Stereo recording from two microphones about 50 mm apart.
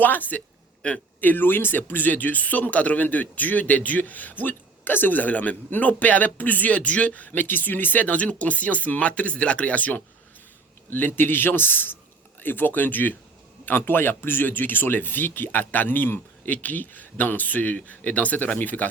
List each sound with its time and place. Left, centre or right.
0.0 s speech: left
0.8 s a man's voice: left
1.2 s speech: left
10.8 s a man's voice: left